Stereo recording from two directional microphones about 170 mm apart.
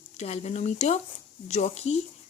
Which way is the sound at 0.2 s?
40° left (ahead or behind).